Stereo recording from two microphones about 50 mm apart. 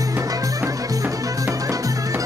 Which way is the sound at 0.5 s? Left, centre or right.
Right.